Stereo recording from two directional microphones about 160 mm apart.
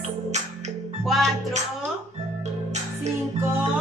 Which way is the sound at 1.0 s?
Centre (ahead or behind).